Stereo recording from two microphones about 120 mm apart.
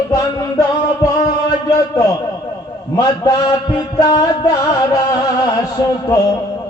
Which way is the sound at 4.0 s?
30° left (ahead or behind).